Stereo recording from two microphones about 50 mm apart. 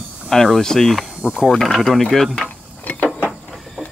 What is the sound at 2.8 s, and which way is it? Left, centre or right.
Mechanisms, left.